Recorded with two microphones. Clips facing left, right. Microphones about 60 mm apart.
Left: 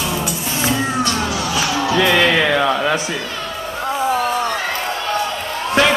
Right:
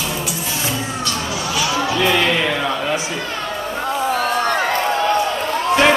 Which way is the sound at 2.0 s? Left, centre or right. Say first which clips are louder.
Left 3 dB; left.